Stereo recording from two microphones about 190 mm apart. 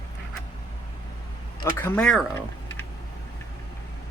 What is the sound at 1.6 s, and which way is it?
Speech, 10° left (ahead or behind).